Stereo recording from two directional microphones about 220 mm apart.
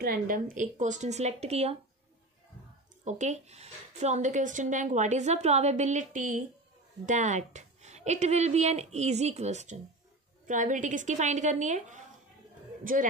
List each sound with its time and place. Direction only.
0.0 s speech: 40° right (ahead or behind)
3.1 s speech: 30° right (ahead or behind)